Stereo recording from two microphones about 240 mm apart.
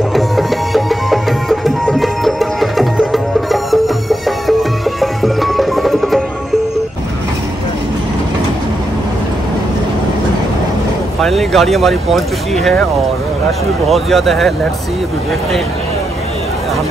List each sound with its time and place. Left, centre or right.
0.1 s music: centre
11.1 s speech: centre